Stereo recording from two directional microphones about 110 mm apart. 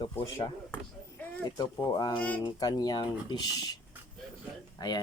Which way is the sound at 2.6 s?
35° left (ahead or behind).